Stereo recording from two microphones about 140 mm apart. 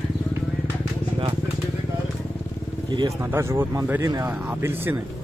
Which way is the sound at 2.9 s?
30° right (ahead or behind).